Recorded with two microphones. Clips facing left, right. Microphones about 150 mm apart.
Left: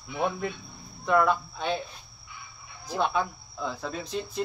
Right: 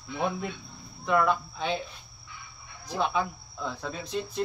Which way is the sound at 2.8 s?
Centre (ahead or behind).